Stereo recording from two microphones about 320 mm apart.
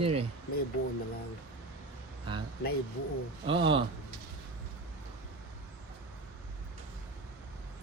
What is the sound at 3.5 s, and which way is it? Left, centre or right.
Speech, centre.